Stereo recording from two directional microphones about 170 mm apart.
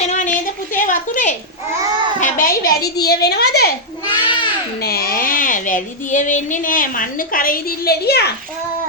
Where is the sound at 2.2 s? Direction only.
50° left (ahead or behind); by 3.8 s 70° left (ahead or behind).